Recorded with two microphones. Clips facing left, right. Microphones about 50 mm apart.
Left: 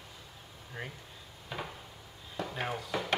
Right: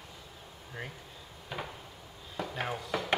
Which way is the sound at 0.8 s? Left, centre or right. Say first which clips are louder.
Even; centre.